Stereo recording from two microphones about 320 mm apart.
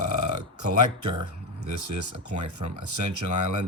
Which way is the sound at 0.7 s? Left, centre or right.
Right.